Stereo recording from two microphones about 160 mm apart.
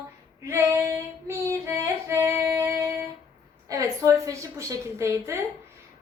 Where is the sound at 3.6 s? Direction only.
20° right (ahead or behind).